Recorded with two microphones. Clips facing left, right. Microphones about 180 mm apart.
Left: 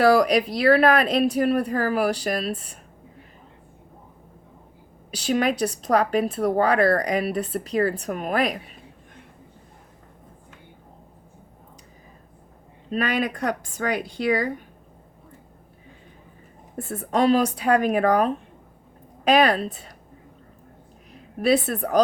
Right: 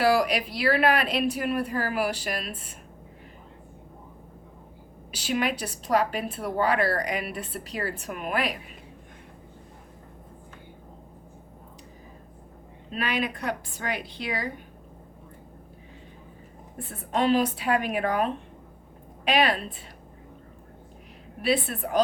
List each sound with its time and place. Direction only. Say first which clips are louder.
0.0 s a woman's voice: left 5 dB; 40° left (ahead or behind)
5.1 s a woman's voice: left 5 dB; 40° left (ahead or behind)
12.9 s speech: left 5 dB; 45° left (ahead or behind)
16.9 s a woman's voice: left 4 dB; 45° left (ahead or behind)
21.4 s speech: left 5 dB; 40° left (ahead or behind)